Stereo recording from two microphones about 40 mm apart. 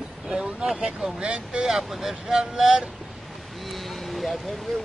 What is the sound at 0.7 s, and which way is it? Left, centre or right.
Speech, centre.